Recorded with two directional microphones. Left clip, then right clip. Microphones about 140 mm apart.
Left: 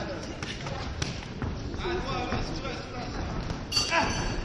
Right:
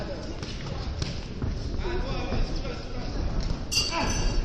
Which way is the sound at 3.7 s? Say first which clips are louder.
Right 1 dB; 60° right (ahead or behind).